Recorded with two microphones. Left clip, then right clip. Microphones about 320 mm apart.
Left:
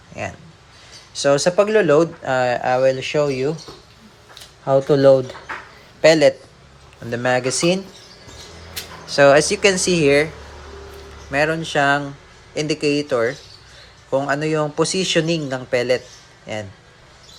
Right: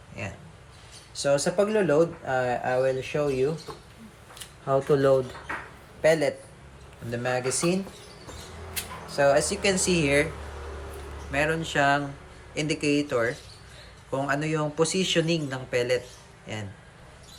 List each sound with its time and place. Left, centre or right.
0.2 s a man's voice: centre
4.6 s a man's voice: left
9.1 s speech: left
11.3 s a man's voice: centre